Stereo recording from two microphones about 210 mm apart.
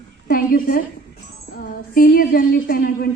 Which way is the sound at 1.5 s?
45° left (ahead or behind).